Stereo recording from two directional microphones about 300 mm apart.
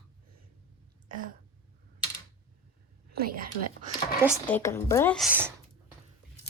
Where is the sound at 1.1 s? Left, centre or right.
Right.